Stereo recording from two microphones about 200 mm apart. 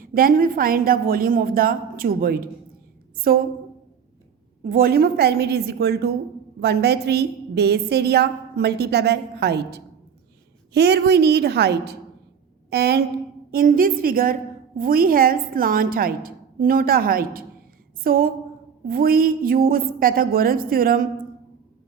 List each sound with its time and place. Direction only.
0.0 s a woman's voice: 45° right (ahead or behind)
4.6 s a woman's voice: 45° right (ahead or behind)